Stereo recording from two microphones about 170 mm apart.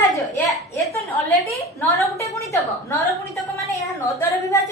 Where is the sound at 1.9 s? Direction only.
15° left (ahead or behind).